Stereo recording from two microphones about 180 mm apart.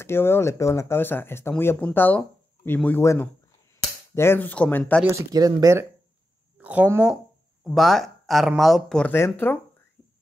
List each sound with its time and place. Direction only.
0.0 s speech: 15° left (ahead or behind)
5.0 s speech: 20° right (ahead or behind); by 9.6 s 10° left (ahead or behind)